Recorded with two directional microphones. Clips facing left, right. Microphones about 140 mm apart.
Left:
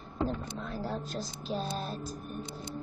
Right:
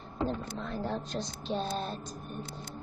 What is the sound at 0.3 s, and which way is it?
Speech, 5° left (ahead or behind).